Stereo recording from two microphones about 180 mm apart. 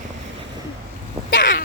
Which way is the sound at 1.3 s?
85° left.